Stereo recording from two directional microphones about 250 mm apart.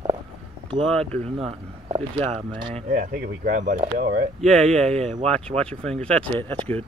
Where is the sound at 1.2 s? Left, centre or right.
Right.